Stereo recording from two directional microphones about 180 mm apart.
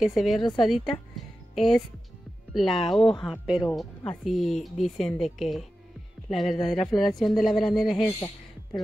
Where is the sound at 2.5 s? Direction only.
Centre (ahead or behind).